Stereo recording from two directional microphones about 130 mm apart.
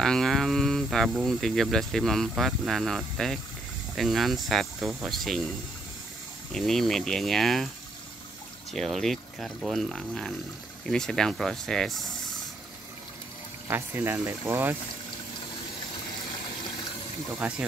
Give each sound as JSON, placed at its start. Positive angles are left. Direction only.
{"t": 0.0, "sound": "speech", "side_deg": 5}
{"t": 6.5, "sound": "speech", "side_deg": 0}
{"t": 8.7, "sound": "speech", "side_deg": 0}
{"t": 13.7, "sound": "speech", "side_deg": -15}
{"t": 17.4, "sound": "speech", "side_deg": -10}